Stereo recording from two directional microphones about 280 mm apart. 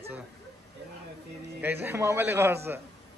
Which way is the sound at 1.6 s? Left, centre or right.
Centre.